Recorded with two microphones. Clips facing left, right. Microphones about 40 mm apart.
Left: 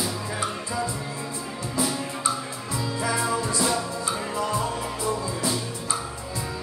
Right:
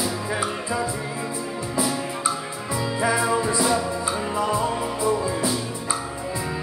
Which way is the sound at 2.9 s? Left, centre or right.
Centre.